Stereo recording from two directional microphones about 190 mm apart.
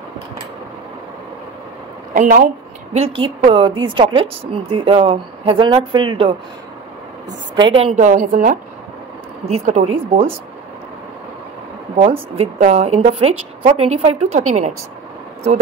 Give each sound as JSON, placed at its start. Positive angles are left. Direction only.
{"t": 2.1, "sound": "a woman's voice", "side_deg": -45}
{"t": 2.9, "sound": "speech", "side_deg": -30}
{"t": 7.5, "sound": "a woman's voice", "side_deg": -25}
{"t": 9.5, "sound": "a woman's voice", "side_deg": -35}
{"t": 12.0, "sound": "a woman's voice", "side_deg": -30}